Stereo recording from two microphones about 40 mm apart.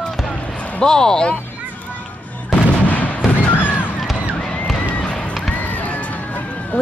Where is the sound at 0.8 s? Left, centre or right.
Centre.